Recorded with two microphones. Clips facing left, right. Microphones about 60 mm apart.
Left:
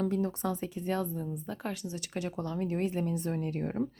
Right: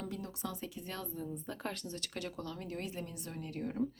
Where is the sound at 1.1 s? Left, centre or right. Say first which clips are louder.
Left 5 dB; centre.